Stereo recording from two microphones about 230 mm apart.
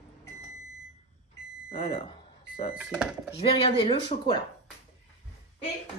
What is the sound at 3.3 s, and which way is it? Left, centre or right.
Speech, left.